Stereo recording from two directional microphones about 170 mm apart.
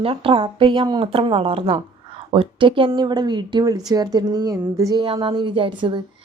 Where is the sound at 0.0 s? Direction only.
35° right (ahead or behind).